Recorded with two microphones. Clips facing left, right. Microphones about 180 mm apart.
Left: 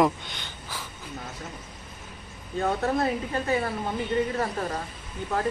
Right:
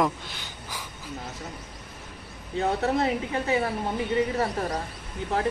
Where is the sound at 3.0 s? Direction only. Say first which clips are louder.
Right 1 dB; 20° right (ahead or behind).